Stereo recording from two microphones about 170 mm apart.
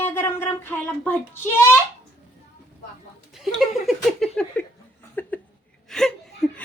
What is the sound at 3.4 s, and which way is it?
Speech, centre (ahead or behind).